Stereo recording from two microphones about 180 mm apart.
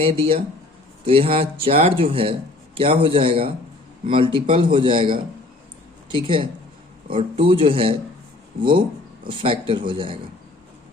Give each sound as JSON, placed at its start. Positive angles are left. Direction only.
{"t": 0.0, "sound": "a man's voice", "side_deg": -30}
{"t": 9.2, "sound": "a man's voice", "side_deg": -30}